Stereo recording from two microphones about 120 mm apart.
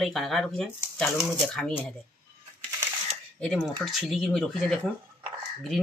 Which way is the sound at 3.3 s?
5° left (ahead or behind).